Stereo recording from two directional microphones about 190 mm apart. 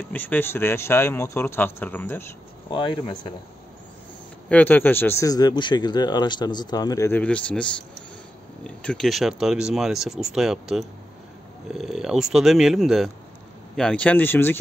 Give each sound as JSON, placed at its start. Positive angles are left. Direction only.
{"t": 0.1, "sound": "speech", "side_deg": 10}
{"t": 2.7, "sound": "speech", "side_deg": 25}
{"t": 4.5, "sound": "speech", "side_deg": 10}
{"t": 8.6, "sound": "speech", "side_deg": 5}